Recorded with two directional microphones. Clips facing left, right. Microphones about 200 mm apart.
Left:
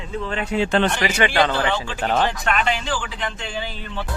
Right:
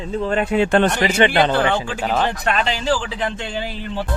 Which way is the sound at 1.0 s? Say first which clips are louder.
Right 3 dB; 25° right (ahead or behind).